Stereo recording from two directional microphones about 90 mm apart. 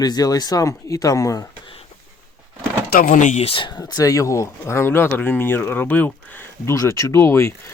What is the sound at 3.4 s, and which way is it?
Speech, 80° left.